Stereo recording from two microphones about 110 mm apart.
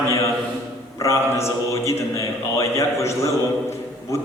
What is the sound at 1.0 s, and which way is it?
A man's voice, 25° left (ahead or behind).